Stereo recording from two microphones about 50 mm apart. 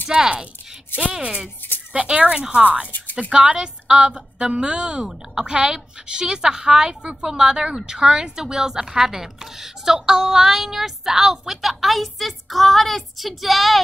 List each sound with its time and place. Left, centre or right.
0.1 s a woman's voice: centre